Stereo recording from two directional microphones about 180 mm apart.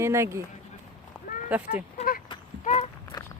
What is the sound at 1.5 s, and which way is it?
Speech, 10° right (ahead or behind).